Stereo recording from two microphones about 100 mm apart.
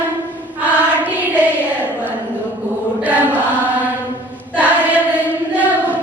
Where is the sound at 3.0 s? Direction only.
15° right (ahead or behind).